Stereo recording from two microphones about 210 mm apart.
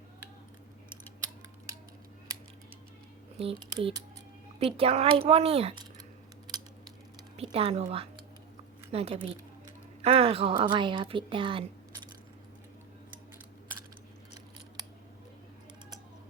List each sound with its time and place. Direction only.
1.2 s a sound: 15° right (ahead or behind)
3.3 s speech: 30° right (ahead or behind)
4.6 s a woman's voice: 25° right (ahead or behind)
7.5 s a woman's voice: 30° right (ahead or behind)